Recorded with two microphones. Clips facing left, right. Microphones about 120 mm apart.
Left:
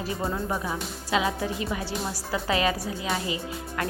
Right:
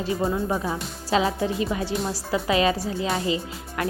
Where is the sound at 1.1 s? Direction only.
30° right (ahead or behind).